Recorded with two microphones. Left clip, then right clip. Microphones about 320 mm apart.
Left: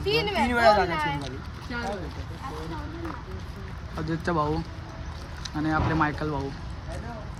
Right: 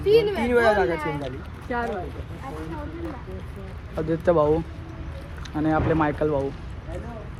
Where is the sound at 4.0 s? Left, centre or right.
Centre.